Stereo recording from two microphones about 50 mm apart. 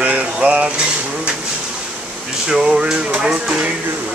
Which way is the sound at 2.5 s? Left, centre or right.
Centre.